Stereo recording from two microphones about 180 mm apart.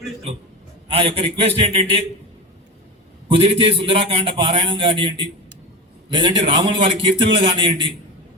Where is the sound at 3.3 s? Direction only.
30° right (ahead or behind).